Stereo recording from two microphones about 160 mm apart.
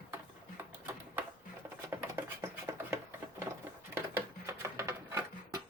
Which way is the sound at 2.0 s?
15° right (ahead or behind).